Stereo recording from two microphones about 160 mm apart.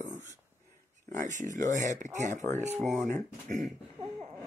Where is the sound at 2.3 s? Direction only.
15° left (ahead or behind).